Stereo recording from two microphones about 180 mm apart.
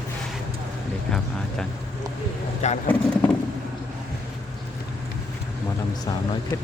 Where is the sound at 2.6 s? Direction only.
40° left (ahead or behind).